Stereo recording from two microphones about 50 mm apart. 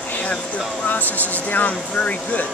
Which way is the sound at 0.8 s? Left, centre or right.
Left.